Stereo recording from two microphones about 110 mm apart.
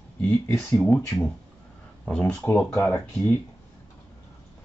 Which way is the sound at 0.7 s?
10° left (ahead or behind).